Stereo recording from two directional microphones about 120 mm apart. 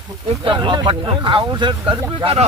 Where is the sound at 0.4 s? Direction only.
40° right (ahead or behind).